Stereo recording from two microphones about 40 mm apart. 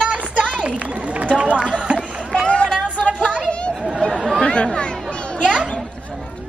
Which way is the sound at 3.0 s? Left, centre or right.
Left.